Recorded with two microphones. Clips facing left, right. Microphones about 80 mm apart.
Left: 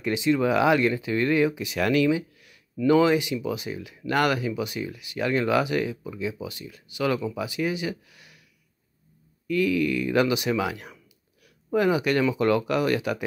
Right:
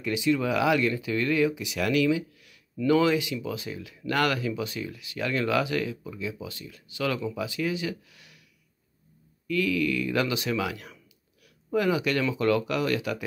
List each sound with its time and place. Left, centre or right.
0.0 s speech: left
1.6 s speech: left
2.0 s a sound: left
2.8 s speech: left
9.5 s speech: left